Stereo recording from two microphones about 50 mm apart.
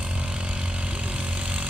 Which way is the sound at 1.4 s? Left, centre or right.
Right.